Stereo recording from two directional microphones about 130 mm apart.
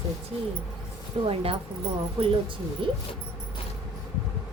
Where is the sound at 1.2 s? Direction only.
45° right (ahead or behind).